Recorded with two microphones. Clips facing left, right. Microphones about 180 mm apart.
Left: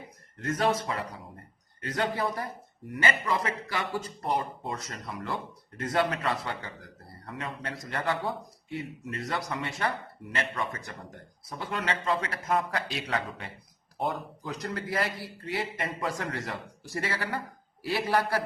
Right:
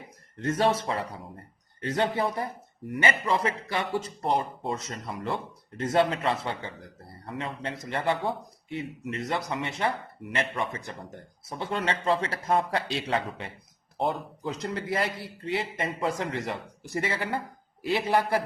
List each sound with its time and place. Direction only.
0.4 s speech: 30° right (ahead or behind)